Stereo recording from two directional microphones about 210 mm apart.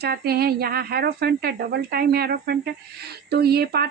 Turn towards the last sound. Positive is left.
turn(degrees=-50)  # may be behind; listen again after turning